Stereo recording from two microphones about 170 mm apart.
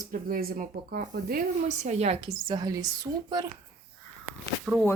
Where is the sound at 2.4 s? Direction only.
25° right (ahead or behind).